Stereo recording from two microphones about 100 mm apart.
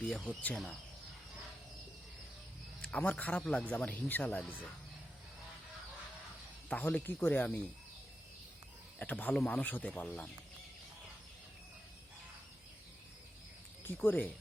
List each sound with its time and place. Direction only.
0.0 s a man's voice: 10° left (ahead or behind)
2.8 s a man's voice: 15° left (ahead or behind)
6.7 s a man's voice: 15° left (ahead or behind)
9.0 s a man's voice: 15° left (ahead or behind)
9.6 s a man's voice: 15° left (ahead or behind)
13.8 s speech: 20° left (ahead or behind)